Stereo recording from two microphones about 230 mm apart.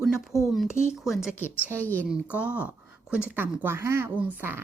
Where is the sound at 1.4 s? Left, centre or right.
Centre.